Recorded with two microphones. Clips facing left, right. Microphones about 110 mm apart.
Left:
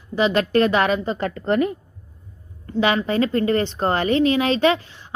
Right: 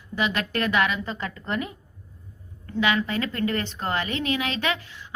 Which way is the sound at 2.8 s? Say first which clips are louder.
Left 5 dB; 35° left (ahead or behind).